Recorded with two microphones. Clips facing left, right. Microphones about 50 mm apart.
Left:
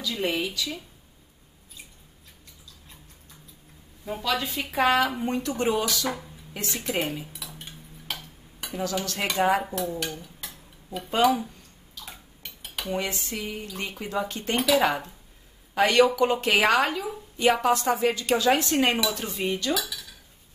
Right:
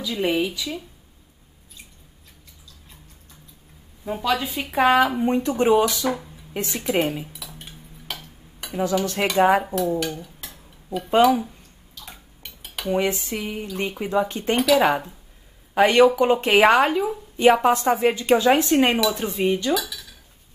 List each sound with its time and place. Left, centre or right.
0.0 s speech: centre
4.0 s speech: centre
6.0 s speech: centre
6.5 s speech: centre
7.3 s a sound: centre
9.0 s speech: right
9.7 s dishes: centre
11.1 s a sound: centre
12.9 s speech: right; by 20.2 s centre